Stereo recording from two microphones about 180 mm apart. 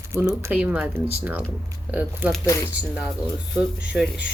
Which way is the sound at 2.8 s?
5° right (ahead or behind).